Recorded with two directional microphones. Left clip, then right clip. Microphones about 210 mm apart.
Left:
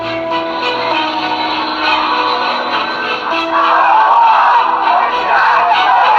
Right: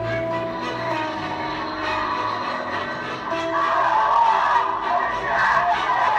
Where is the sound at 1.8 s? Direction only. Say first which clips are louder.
Left 11 dB; 30° left (ahead or behind).